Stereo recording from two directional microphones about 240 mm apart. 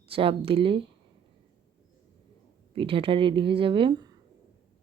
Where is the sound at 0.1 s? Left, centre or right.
Right.